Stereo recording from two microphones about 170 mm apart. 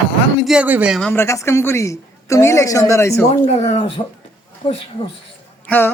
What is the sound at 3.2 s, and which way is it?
Speech, 35° left (ahead or behind).